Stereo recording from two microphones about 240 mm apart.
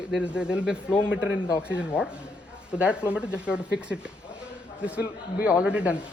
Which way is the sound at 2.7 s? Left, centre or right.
Centre.